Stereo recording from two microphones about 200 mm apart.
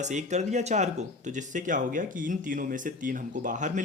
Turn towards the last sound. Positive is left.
turn(degrees=-40)  # may be behind; listen again after turning